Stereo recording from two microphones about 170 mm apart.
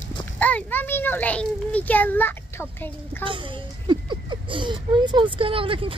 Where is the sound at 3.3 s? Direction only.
30° right (ahead or behind).